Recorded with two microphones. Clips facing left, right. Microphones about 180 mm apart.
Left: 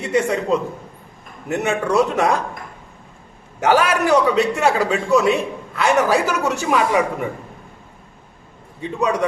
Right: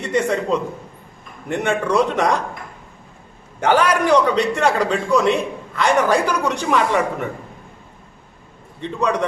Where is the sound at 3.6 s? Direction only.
5° left (ahead or behind).